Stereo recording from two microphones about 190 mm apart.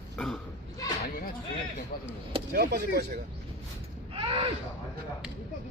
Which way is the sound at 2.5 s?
55° right (ahead or behind).